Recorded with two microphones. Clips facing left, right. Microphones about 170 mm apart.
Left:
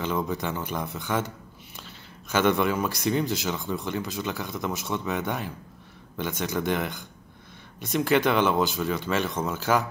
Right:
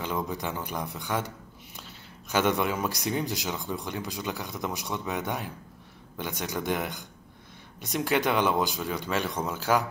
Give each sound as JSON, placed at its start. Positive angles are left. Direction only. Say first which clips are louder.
{"t": 0.0, "sound": "speech", "louder": "left 3 dB", "side_deg": -15}